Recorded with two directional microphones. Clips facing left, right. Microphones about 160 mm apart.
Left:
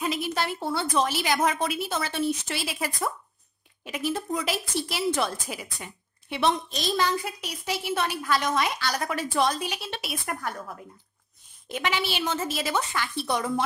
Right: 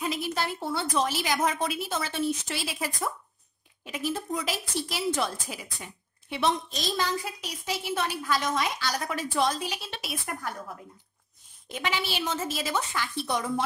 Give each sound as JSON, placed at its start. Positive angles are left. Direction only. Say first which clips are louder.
{"t": 0.0, "sound": "a woman's voice", "louder": "left 2 dB", "side_deg": 70}
{"t": 11.7, "sound": "a woman's voice", "louder": "left 2 dB", "side_deg": 70}